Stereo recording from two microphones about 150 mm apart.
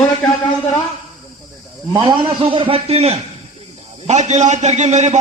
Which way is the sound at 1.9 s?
30° right (ahead or behind).